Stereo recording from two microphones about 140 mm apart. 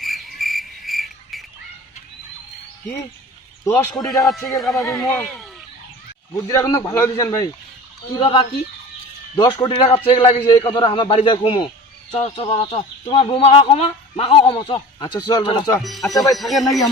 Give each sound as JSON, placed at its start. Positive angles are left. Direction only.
{"t": 0.0, "sound": "frog", "side_deg": 0}
{"t": 3.6, "sound": "a man's voice", "side_deg": 25}
{"t": 4.2, "sound": "speech", "side_deg": 0}
{"t": 6.3, "sound": "a man's voice", "side_deg": 25}
{"t": 8.2, "sound": "speech", "side_deg": 40}
{"t": 9.3, "sound": "speech", "side_deg": 30}
{"t": 10.4, "sound": "speech", "side_deg": 30}
{"t": 12.1, "sound": "speech", "side_deg": 45}
{"t": 15.8, "sound": "speech", "side_deg": 0}